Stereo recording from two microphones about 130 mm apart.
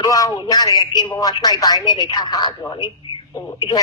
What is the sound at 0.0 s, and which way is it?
Speech, 25° left (ahead or behind).